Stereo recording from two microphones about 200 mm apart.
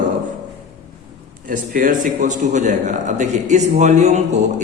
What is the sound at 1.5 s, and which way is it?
A man's voice, 45° right (ahead or behind).